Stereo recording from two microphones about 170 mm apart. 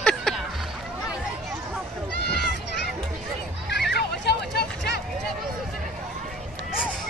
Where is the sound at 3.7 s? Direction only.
80° left.